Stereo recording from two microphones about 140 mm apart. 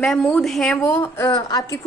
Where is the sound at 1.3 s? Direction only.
30° left (ahead or behind).